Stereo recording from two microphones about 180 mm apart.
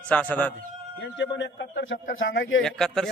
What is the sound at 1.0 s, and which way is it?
Speech, 80° left.